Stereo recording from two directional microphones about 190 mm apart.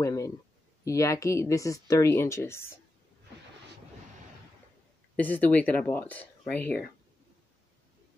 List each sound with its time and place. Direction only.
0.0 s a sound: 15° left (ahead or behind)
0.8 s speech: 15° left (ahead or behind)
5.1 s speech: 10° left (ahead or behind)